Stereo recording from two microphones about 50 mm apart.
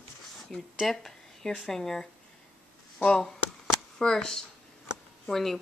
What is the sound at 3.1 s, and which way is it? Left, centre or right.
Speech, centre.